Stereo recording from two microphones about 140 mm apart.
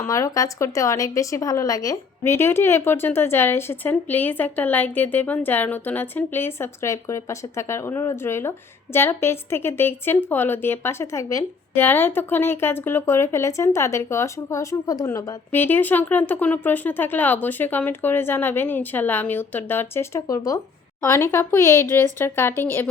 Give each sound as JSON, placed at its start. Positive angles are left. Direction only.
{"t": 0.0, "sound": "speech", "side_deg": 20}